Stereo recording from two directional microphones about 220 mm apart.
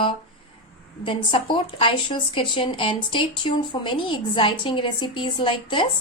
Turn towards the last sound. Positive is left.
turn(degrees=20)  # may be behind; listen again after turning